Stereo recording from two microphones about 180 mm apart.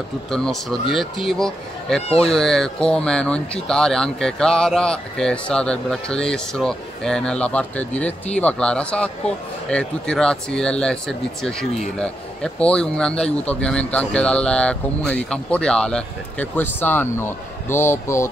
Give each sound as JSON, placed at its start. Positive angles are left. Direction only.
{"t": 0.3, "sound": "speech", "side_deg": 0}
{"t": 2.0, "sound": "speech", "side_deg": 35}
{"t": 2.3, "sound": "speech", "side_deg": 0}